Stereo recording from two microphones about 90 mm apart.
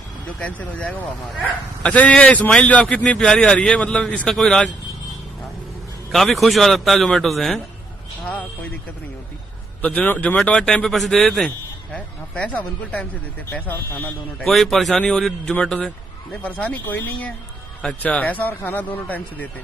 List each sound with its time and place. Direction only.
0.4 s speech: 15° left (ahead or behind)
6.1 s a man's voice: centre (ahead or behind)
9.8 s speech: 15° left (ahead or behind)
14.4 s a man's voice: 5° left (ahead or behind)